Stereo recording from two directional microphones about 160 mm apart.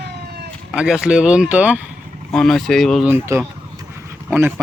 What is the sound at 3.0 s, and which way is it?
Speech, 15° right (ahead or behind).